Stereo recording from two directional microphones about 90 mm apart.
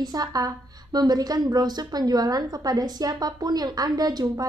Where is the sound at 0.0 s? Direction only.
45° right (ahead or behind).